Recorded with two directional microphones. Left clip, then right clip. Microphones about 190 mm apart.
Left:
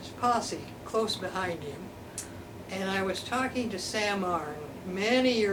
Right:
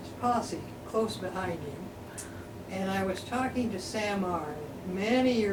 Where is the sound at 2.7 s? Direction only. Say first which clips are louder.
Left 1 dB; centre (ahead or behind).